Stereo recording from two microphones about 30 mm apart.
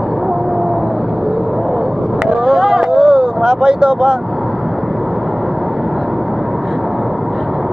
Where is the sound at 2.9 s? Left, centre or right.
Right.